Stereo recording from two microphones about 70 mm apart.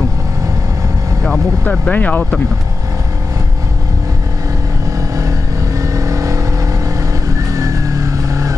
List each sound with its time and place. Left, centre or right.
1.2 s speech: centre
1.9 s speech: left
5.8 s vehicle: right